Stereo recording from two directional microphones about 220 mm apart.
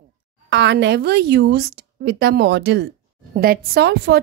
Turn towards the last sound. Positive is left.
turn(degrees=-50)  # may be behind; listen again after turning